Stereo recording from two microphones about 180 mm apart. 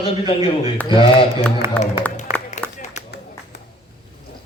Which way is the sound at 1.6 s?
15° right (ahead or behind).